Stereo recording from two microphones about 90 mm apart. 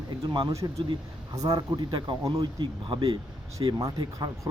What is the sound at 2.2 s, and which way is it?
Speech, 45° right (ahead or behind).